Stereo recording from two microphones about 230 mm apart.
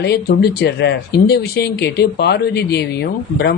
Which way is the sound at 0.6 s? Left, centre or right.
Left.